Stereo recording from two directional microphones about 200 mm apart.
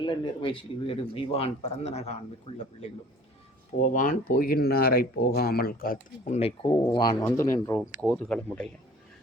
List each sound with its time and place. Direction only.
0.0 s a man's voice: 25° left (ahead or behind)
3.9 s speech: 45° left (ahead or behind); by 8.7 s 5° left (ahead or behind)